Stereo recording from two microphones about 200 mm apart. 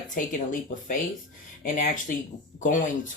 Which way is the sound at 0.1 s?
40° left (ahead or behind).